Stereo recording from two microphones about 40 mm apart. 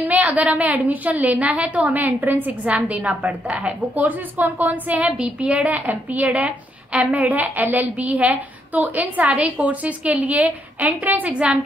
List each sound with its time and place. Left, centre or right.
0.1 s a woman's voice: right
1.9 s a woman's voice: right
2.7 s a woman's voice: right
5.1 s a woman's voice: right